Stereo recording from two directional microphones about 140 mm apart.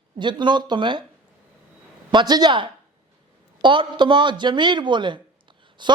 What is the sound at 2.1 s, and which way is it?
A man's voice, 30° right (ahead or behind).